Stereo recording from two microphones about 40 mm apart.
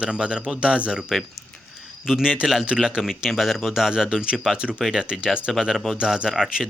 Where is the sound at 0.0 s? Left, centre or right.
Right.